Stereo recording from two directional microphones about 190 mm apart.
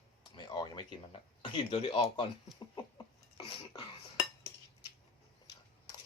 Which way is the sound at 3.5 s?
25° left (ahead or behind).